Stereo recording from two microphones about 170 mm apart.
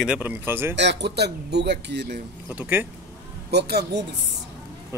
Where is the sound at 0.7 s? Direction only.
85° right.